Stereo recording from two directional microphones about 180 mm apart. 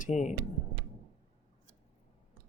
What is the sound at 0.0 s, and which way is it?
Speech, 40° left (ahead or behind).